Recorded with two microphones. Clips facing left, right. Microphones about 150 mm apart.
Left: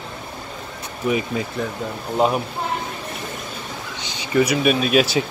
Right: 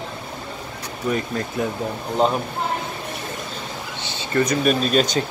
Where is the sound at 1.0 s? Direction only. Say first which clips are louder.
Left 2 dB; 5° left (ahead or behind).